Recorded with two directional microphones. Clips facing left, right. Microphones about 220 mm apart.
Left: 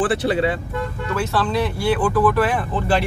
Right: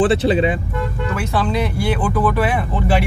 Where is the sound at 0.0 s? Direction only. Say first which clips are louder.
Right 4 dB; 20° right (ahead or behind).